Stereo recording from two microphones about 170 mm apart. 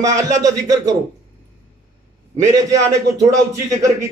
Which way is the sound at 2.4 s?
20° right (ahead or behind).